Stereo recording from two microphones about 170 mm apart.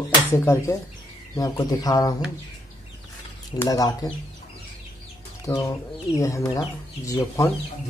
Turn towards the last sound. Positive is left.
turn(degrees=20)  # may be behind; listen again after turning